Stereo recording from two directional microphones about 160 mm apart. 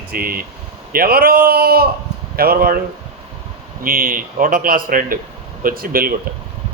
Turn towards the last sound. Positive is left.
turn(degrees=-65)  # may be behind; listen again after turning